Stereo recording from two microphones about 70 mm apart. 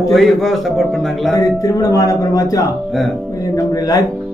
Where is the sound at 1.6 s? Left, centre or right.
Left.